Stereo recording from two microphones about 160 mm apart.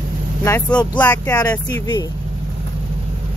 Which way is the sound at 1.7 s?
25° left (ahead or behind).